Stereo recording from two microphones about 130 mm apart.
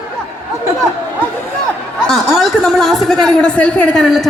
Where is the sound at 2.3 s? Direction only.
Centre (ahead or behind).